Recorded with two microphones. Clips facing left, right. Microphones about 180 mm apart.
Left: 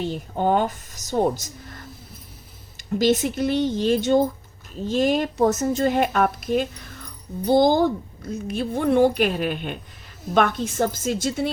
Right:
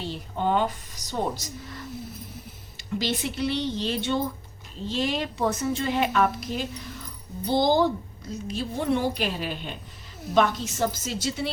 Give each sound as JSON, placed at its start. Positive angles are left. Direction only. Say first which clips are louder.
{"t": 0.0, "sound": "a woman's voice", "louder": "left 5 dB", "side_deg": 45}